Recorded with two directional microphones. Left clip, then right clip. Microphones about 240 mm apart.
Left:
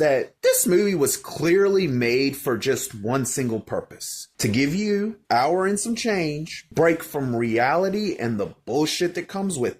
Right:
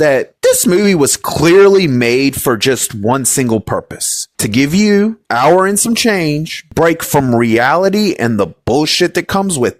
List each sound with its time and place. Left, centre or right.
0.0 s speech: right